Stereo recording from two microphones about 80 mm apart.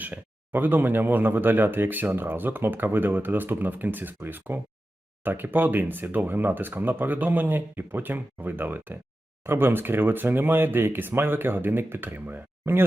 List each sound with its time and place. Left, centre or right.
0.0 s speech: right